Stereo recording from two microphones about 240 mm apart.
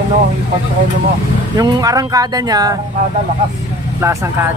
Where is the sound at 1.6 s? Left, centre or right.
Centre.